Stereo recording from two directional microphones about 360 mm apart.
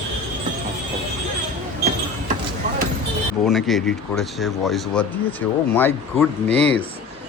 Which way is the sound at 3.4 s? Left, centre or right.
Centre.